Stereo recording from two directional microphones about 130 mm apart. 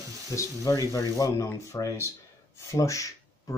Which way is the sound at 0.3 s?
25° left (ahead or behind).